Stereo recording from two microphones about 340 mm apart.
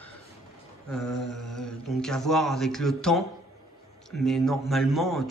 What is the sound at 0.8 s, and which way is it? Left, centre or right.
A man's voice, centre.